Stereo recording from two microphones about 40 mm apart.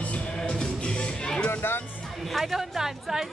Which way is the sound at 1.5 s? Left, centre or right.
Left.